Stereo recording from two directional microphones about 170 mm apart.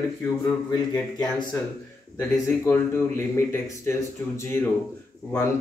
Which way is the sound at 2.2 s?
15° left (ahead or behind).